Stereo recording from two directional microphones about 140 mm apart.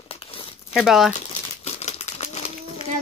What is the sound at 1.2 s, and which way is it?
Crumpling, 50° left (ahead or behind).